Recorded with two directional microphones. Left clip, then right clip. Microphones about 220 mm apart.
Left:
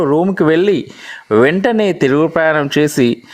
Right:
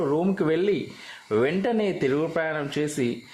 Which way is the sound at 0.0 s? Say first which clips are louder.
Left 11 dB; 35° left (ahead or behind).